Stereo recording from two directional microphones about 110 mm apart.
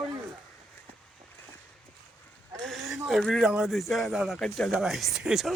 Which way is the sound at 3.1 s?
Centre (ahead or behind).